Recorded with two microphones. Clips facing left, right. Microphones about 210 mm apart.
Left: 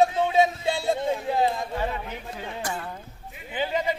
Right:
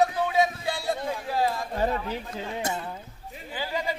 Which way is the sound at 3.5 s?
20° left (ahead or behind).